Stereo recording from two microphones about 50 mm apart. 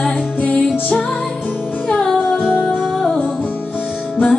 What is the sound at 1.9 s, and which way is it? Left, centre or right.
Music, centre.